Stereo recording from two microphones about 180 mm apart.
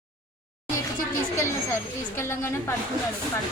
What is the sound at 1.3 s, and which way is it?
A woman's voice, 15° left (ahead or behind).